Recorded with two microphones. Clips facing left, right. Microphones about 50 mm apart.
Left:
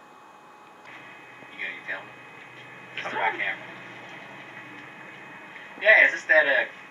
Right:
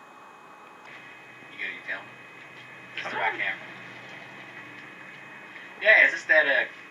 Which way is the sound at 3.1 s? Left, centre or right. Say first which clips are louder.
Left 1 dB; centre.